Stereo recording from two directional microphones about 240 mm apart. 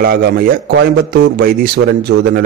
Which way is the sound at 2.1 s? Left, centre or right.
Right.